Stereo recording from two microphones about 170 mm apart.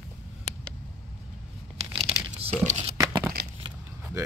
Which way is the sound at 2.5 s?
40° right (ahead or behind).